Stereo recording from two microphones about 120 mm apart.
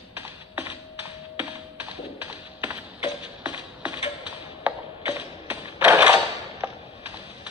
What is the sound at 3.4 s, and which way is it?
Music, 10° right (ahead or behind).